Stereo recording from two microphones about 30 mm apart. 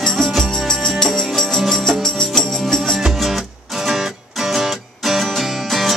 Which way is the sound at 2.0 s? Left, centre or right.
Centre.